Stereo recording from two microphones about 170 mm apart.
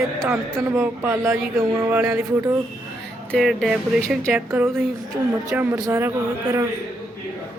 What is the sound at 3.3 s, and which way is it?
Speech, centre (ahead or behind).